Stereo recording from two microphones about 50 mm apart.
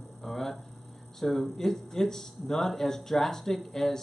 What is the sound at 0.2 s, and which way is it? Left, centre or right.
Hum, centre.